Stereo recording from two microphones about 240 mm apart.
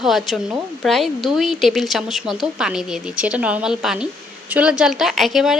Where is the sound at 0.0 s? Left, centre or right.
Centre.